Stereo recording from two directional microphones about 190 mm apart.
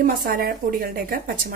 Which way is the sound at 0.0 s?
50° right (ahead or behind).